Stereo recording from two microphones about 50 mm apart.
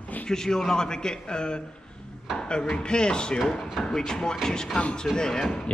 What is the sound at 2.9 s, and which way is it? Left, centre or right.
A man's voice, centre.